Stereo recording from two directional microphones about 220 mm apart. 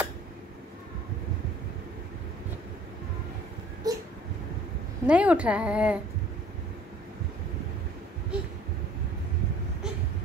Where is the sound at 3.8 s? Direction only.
15° right (ahead or behind).